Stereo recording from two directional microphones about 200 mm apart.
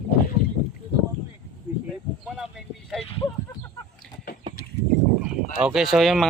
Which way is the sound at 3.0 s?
30° left (ahead or behind).